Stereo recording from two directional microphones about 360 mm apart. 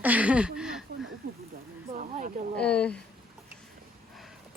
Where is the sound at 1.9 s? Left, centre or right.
Right.